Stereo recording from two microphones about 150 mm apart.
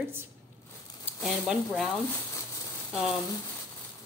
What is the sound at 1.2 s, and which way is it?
Speech, centre (ahead or behind).